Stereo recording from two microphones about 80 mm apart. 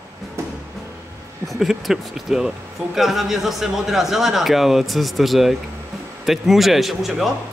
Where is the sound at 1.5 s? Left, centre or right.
Centre.